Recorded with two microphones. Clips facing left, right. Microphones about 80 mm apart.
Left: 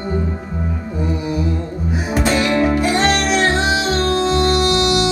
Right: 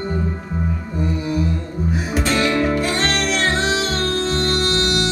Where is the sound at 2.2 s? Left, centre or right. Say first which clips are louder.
Left 3 dB; centre.